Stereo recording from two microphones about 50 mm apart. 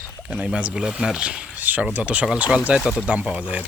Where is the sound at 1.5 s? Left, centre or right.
Right.